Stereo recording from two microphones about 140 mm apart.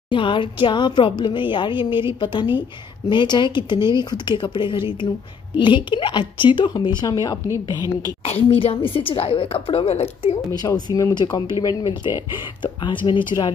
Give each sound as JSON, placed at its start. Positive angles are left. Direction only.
{"t": 0.1, "sound": "speech", "side_deg": 35}
{"t": 8.2, "sound": "a woman's voice", "side_deg": 45}
{"t": 10.7, "sound": "speech", "side_deg": 25}